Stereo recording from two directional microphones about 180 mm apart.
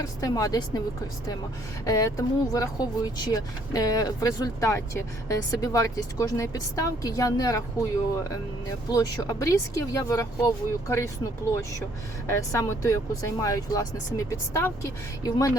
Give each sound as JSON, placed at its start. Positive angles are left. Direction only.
{"t": 0.0, "sound": "speech", "side_deg": 20}
{"t": 1.9, "sound": "speech", "side_deg": 20}
{"t": 8.9, "sound": "speech", "side_deg": 20}
{"t": 12.3, "sound": "speech", "side_deg": 15}